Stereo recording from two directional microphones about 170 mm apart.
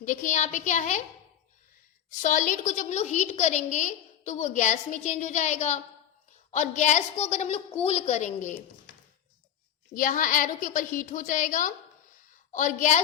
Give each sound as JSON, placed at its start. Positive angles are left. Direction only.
{"t": 0.0, "sound": "a woman's voice", "side_deg": 50}
{"t": 2.2, "sound": "a woman's voice", "side_deg": 50}
{"t": 9.9, "sound": "a woman's voice", "side_deg": 50}